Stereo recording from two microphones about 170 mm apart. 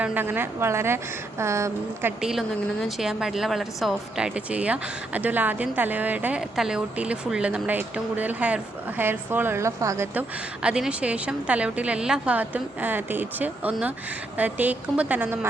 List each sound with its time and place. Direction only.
0.0 s speech: 10° right (ahead or behind)